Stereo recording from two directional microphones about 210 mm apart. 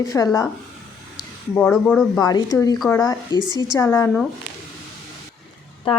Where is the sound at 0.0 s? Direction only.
15° left (ahead or behind).